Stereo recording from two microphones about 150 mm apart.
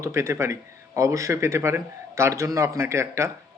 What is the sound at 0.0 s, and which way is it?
Speech, 20° right (ahead or behind).